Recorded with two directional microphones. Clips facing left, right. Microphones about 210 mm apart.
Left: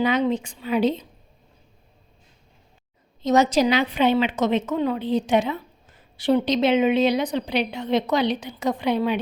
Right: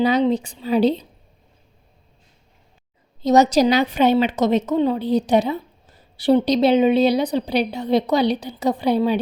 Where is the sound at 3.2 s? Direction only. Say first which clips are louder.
Right 4 dB; 40° right (ahead or behind).